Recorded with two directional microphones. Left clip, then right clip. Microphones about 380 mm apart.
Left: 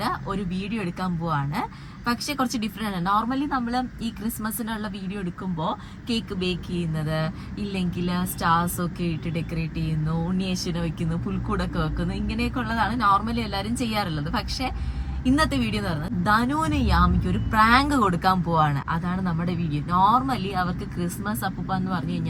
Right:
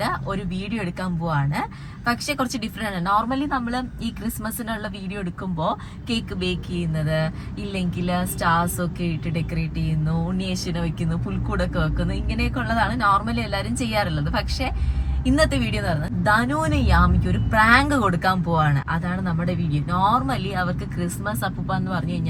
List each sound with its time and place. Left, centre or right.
1.0 s speech: centre
2.8 s speech: centre
5.5 s speech: centre